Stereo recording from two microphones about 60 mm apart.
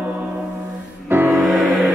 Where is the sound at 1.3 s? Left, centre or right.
Centre.